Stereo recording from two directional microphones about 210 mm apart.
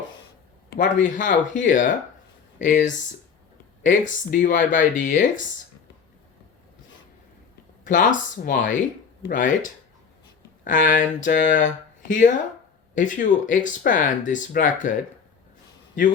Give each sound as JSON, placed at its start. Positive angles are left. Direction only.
{"t": 0.7, "sound": "speech", "side_deg": 40}
{"t": 7.9, "sound": "speech", "side_deg": 40}